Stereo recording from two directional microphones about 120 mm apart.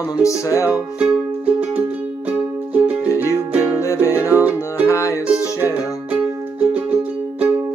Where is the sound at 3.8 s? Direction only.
25° left (ahead or behind).